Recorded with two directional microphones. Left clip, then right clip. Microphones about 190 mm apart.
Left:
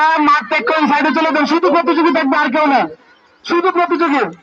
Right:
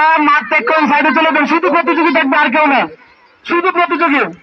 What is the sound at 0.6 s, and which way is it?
Speech, 25° left (ahead or behind).